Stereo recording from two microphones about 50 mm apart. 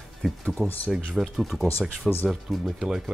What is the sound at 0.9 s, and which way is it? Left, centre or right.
Speech, centre.